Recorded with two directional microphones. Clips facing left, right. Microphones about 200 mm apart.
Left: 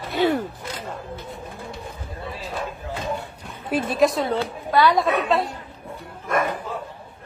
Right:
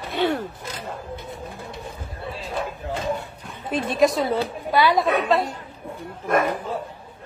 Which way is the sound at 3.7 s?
Centre (ahead or behind).